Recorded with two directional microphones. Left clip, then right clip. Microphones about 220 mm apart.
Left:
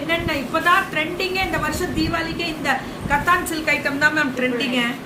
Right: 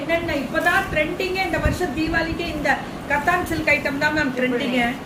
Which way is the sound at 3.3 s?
10° left (ahead or behind).